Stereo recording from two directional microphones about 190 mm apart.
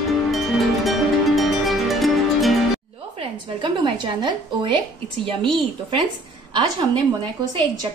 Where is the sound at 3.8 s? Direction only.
25° right (ahead or behind).